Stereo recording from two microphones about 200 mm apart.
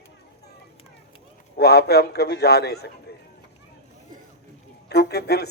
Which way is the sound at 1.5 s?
50° left (ahead or behind).